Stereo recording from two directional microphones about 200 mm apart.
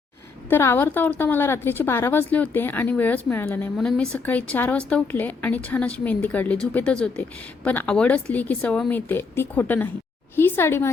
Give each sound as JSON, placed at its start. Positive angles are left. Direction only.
{"t": 0.5, "sound": "a woman's voice", "side_deg": 10}